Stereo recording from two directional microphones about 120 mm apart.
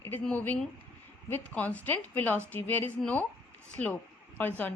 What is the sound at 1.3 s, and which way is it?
A woman's voice, 10° left (ahead or behind).